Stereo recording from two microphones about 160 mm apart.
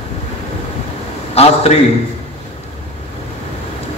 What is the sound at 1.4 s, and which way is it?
Speech, 40° left (ahead or behind).